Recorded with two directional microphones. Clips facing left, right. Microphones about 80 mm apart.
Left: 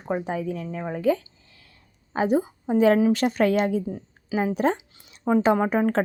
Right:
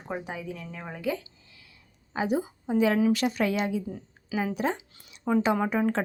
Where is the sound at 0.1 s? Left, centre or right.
Left.